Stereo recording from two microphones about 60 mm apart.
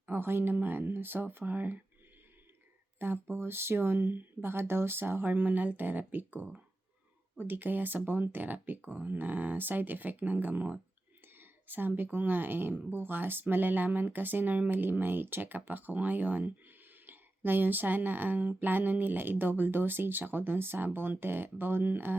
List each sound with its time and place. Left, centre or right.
0.0 s speech: right
3.0 s speech: right
11.3 s a sound: right
12.1 s speech: right